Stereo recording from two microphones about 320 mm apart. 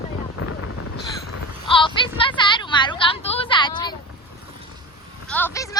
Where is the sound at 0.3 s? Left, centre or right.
Left.